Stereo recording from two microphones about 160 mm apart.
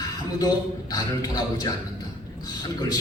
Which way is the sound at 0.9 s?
25° left (ahead or behind).